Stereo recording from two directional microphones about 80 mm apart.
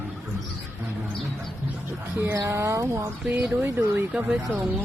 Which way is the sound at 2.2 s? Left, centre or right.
Right.